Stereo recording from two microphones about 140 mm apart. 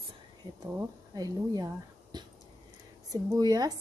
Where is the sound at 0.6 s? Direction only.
25° right (ahead or behind).